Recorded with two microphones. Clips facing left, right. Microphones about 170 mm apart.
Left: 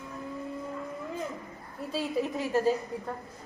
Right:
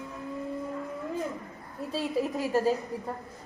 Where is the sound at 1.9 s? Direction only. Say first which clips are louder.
Right 1 dB; centre (ahead or behind).